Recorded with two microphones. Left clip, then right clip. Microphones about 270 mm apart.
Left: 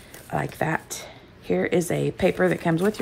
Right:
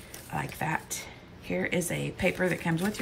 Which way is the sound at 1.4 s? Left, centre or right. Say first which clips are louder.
Left 7 dB; centre.